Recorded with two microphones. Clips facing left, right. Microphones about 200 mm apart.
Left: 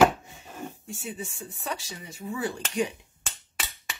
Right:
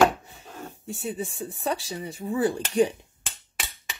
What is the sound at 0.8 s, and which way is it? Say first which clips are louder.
Speech: right 5 dB; 35° right (ahead or behind).